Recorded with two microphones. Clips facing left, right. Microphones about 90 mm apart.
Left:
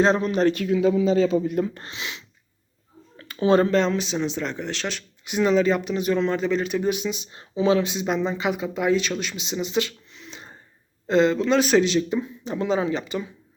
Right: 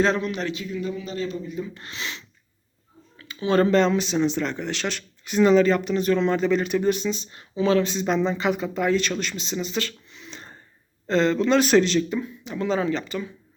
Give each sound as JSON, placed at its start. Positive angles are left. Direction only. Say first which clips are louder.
{"t": 0.0, "sound": "a man's voice", "louder": "left 4 dB", "side_deg": 30}
{"t": 0.5, "sound": "speech", "louder": "left 9 dB", "side_deg": 75}
{"t": 1.9, "sound": "speech", "louder": "right 1 dB", "side_deg": 10}
{"t": 3.2, "sound": "a sound", "louder": "left 6 dB", "side_deg": 40}
{"t": 3.6, "sound": "speech", "louder": "right 2 dB", "side_deg": 0}
{"t": 10.1, "sound": "a sound", "louder": "even", "side_deg": 0}
{"t": 11.0, "sound": "speech", "louder": "left 1 dB", "side_deg": 10}
{"t": 12.0, "sound": "speech", "louder": "left 2 dB", "side_deg": 20}